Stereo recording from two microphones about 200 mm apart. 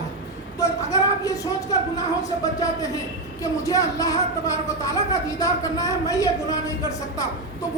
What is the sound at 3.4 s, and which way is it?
Speech, 15° left (ahead or behind).